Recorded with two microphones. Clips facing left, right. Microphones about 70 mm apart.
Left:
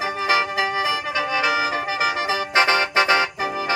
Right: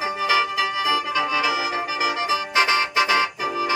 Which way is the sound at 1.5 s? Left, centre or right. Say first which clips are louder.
Left 2 dB; left.